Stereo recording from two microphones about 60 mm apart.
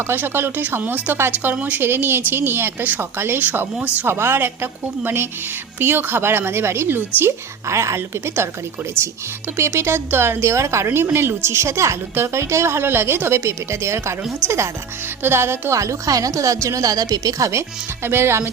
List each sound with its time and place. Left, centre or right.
0.1 s a woman's voice: right
1.8 s a woman's voice: right
7.7 s speech: right
9.6 s speech: right
15.8 s speech: right